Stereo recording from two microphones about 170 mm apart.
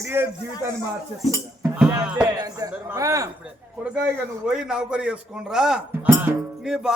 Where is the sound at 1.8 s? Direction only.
5° right (ahead or behind).